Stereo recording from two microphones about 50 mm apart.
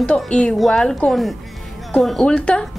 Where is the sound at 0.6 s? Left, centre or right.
Centre.